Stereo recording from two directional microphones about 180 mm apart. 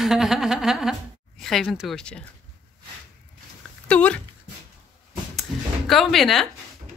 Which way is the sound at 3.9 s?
5° left (ahead or behind).